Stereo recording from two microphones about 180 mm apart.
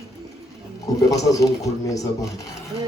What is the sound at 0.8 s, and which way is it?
Speech, 20° left (ahead or behind).